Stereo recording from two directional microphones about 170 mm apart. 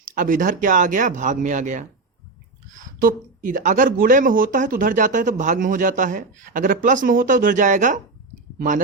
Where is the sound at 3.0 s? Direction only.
50° right (ahead or behind).